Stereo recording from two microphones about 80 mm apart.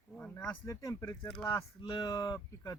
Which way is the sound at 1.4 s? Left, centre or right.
Left.